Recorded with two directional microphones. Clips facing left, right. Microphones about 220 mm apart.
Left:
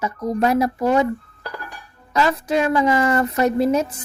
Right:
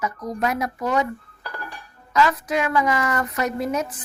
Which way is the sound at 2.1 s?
30° left (ahead or behind).